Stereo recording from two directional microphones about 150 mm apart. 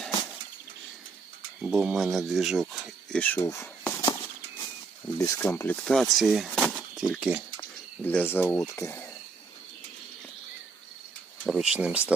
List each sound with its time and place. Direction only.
1.6 s speech: 10° right (ahead or behind)
3.2 s speech: 10° left (ahead or behind)
5.1 s speech: 20° left (ahead or behind)
5.7 s speech: 5° left (ahead or behind)
8.0 s speech: 10° left (ahead or behind)
11.4 s speech: 5° right (ahead or behind)